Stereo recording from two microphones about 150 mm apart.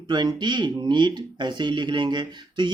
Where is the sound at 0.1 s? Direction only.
30° right (ahead or behind).